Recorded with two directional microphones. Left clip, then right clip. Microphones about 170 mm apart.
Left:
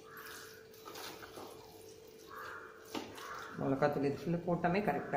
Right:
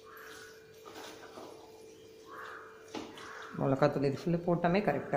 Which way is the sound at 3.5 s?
50° right (ahead or behind).